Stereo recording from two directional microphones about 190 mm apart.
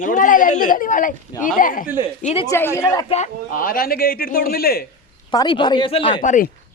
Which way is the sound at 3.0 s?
35° left (ahead or behind).